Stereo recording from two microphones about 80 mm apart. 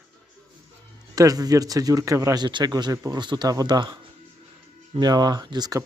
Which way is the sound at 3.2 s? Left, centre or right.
Right.